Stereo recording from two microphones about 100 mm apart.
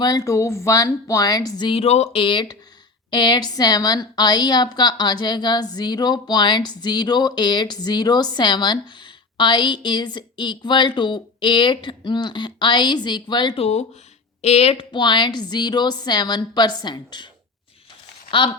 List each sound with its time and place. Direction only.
0.0 s a woman's voice: 40° left (ahead or behind)
1.7 s speech: 90° left
2.2 s a woman's voice: 50° left (ahead or behind)
13.6 s speech: 90° left
14.9 s a woman's voice: 50° left (ahead or behind)
18.3 s speech: 55° left (ahead or behind)